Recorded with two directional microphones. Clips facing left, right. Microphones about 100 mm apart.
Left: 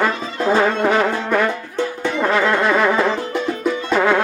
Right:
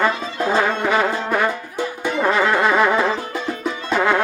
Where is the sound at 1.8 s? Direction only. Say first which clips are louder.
Left 2 dB; 10° right (ahead or behind).